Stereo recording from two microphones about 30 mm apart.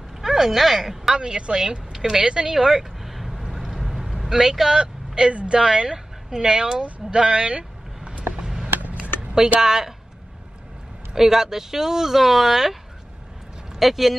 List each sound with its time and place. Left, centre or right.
0.2 s a sound: centre
1.1 s speech: right
2.5 s vehicle: centre
4.5 s speech: centre
4.7 s vehicle: right
5.5 s speech: right
8.9 s a sound: right
9.6 s speech: centre
11.1 s speech: centre
13.7 s speech: centre